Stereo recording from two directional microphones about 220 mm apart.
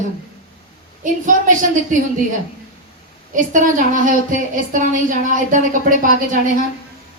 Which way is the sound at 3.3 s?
35° right (ahead or behind).